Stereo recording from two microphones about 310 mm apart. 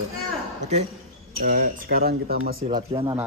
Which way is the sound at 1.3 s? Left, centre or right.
Right.